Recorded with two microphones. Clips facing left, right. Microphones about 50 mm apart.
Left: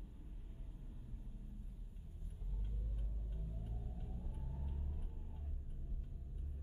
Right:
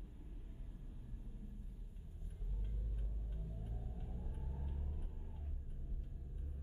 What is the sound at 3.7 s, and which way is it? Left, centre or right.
Vehicle, centre.